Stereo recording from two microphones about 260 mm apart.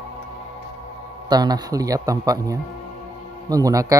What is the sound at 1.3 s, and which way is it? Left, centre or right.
Speech, centre.